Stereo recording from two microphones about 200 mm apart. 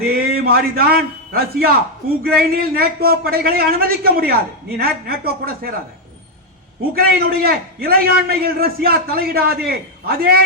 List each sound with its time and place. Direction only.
0.0 s a man's voice: 50° right (ahead or behind)
6.9 s a man's voice: 50° right (ahead or behind)